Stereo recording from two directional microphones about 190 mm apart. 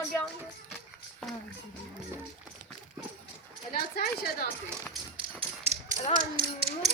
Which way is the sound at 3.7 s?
50° left (ahead or behind).